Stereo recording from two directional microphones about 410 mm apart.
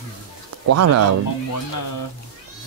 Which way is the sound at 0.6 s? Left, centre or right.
Right.